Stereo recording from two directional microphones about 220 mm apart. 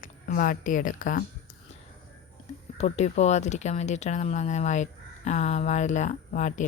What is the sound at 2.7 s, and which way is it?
Speech, 30° left (ahead or behind).